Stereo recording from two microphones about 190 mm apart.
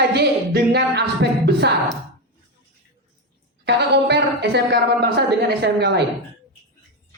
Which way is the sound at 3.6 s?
60° right (ahead or behind).